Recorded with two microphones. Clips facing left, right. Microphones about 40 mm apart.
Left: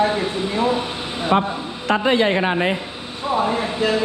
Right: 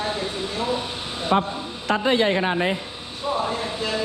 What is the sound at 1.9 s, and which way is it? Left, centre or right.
Speech, left.